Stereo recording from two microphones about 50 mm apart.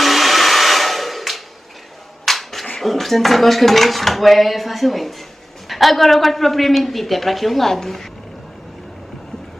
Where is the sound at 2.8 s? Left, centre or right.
Centre.